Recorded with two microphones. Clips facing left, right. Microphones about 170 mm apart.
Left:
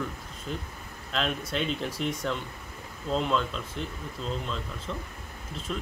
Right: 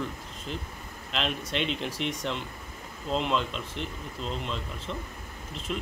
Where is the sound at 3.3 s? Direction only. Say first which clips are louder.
Left 1 dB; centre (ahead or behind).